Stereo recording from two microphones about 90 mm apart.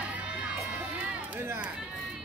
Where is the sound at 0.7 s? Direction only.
15° right (ahead or behind).